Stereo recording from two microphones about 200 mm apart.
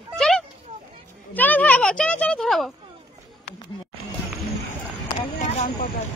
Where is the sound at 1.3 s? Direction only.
10° left (ahead or behind).